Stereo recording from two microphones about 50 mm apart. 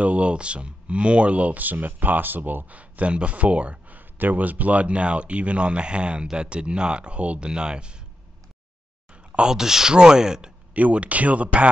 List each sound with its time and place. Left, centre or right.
0.0 s speech: right
9.1 s a sound: right
9.5 s speech: centre
10.7 s speech: right